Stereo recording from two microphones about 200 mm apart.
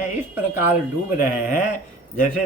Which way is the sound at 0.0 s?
40° left (ahead or behind).